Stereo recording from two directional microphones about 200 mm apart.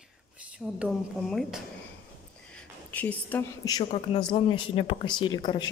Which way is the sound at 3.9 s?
30° left (ahead or behind).